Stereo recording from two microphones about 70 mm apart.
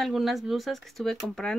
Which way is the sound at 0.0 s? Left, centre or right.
Centre.